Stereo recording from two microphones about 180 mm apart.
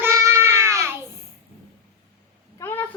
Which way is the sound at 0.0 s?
15° right (ahead or behind).